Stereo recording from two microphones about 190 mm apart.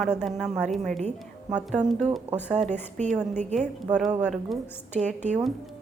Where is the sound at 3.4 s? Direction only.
35° right (ahead or behind).